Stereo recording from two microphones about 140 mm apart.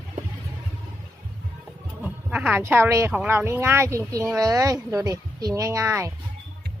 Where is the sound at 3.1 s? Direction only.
10° right (ahead or behind).